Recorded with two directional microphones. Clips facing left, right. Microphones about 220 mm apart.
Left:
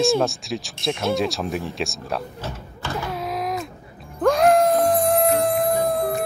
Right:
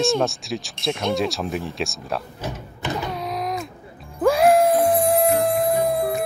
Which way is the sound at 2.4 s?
20° right (ahead or behind).